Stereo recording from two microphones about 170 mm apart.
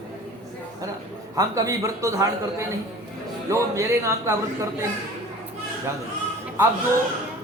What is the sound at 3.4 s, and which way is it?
Speech, 15° right (ahead or behind).